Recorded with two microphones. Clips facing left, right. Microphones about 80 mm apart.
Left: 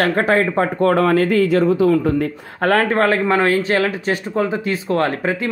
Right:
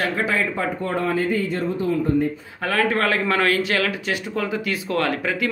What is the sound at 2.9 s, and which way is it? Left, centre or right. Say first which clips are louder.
Speech: left 5 dB; left.